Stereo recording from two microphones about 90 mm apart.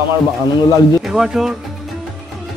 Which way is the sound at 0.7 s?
45° left (ahead or behind).